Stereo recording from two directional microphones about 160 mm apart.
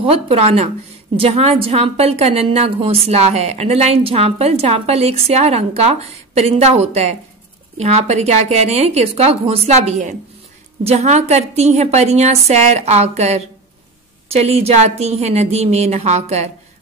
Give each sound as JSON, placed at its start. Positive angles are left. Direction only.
{"t": 0.0, "sound": "a woman's voice", "side_deg": -40}